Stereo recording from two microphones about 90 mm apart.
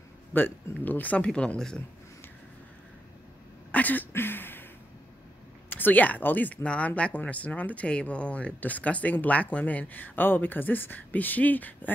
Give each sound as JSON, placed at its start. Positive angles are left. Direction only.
{"t": 0.3, "sound": "speech", "side_deg": 20}
{"t": 3.7, "sound": "a sound", "side_deg": 20}
{"t": 5.7, "sound": "speech", "side_deg": 20}